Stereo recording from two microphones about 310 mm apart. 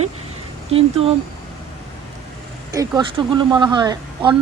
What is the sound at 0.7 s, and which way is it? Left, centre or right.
Speech, centre.